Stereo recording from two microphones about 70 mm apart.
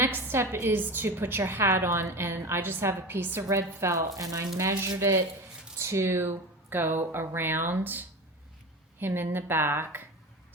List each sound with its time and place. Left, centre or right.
0.0 s a woman's voice: right
3.4 s a woman's voice: right